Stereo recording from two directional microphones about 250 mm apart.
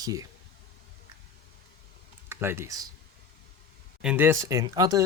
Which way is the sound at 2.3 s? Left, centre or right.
Centre.